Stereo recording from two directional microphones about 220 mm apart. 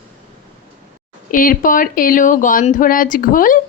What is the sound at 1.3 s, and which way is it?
A woman's voice, 40° left (ahead or behind).